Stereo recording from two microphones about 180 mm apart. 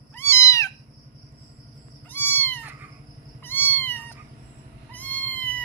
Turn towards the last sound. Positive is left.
turn(degrees=10)  # may be behind; listen again after turning